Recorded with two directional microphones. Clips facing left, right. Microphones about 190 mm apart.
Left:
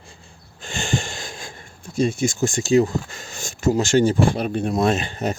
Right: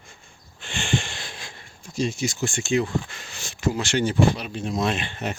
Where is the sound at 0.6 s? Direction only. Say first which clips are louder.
Left 1 dB; 40° left (ahead or behind).